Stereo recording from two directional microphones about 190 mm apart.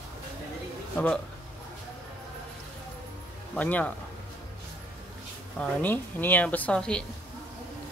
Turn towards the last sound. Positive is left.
turn(degrees=5)  # may be behind; listen again after turning